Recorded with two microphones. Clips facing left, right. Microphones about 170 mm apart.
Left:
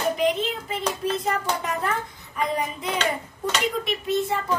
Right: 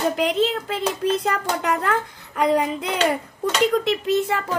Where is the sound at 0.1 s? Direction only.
85° right.